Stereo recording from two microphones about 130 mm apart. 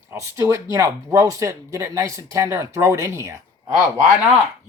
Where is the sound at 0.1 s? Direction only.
20° right (ahead or behind).